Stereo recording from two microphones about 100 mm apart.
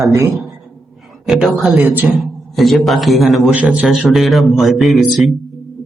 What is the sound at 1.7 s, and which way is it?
Speech, 20° right (ahead or behind).